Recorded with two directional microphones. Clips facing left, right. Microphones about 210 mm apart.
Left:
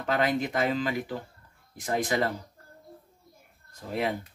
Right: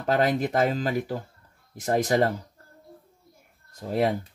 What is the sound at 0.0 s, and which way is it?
Speech, 40° right (ahead or behind).